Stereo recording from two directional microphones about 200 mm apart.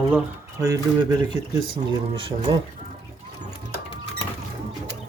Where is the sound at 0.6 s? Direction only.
15° right (ahead or behind).